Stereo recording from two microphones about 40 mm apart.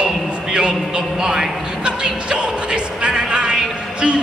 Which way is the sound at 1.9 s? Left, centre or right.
Right.